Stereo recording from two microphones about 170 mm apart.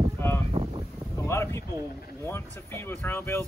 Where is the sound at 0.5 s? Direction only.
30° right (ahead or behind).